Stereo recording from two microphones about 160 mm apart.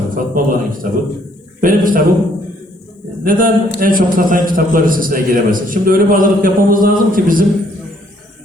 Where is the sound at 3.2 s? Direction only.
60° right (ahead or behind).